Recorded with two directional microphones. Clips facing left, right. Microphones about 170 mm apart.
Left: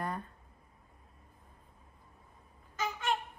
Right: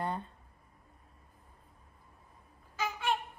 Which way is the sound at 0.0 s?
30° right (ahead or behind).